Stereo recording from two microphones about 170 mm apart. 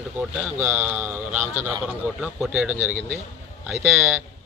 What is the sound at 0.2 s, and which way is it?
Speech, 10° right (ahead or behind).